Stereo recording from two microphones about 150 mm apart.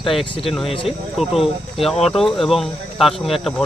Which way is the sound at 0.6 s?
35° left (ahead or behind).